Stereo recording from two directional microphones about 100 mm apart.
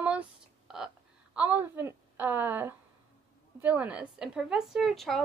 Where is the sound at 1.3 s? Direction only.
15° right (ahead or behind).